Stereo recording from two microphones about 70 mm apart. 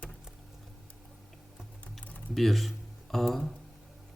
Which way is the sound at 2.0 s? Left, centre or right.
Left.